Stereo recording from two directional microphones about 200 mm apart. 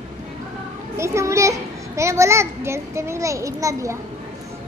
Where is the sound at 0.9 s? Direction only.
15° right (ahead or behind).